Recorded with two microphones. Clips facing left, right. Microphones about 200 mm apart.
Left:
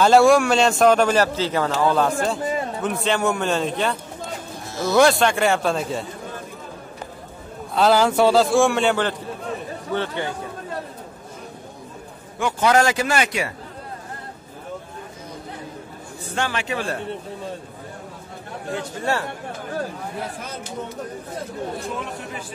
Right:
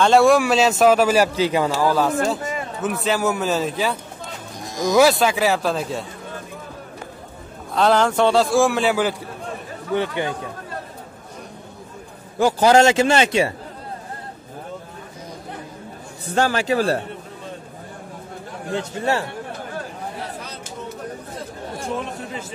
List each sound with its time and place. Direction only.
0.0 s a man's voice: centre (ahead or behind)
4.6 s a man's voice: 15° right (ahead or behind)
7.7 s a man's voice: 5° left (ahead or behind)
9.9 s speech: 15° right (ahead or behind)
12.4 s a man's voice: 35° right (ahead or behind)
16.3 s a man's voice: 40° right (ahead or behind)
18.8 s a man's voice: 20° right (ahead or behind)